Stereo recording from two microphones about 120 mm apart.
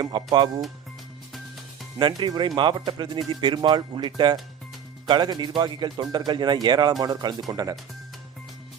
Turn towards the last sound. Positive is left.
turn(degrees=-30)  # may be behind; listen again after turning